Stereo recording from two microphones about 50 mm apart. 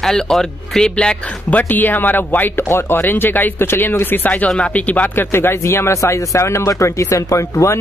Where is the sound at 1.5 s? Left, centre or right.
Left.